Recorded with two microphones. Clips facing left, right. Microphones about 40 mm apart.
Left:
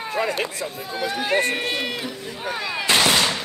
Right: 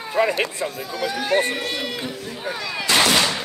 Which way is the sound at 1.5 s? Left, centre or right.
Left.